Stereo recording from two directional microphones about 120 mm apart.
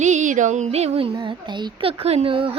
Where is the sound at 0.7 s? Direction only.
60° right (ahead or behind).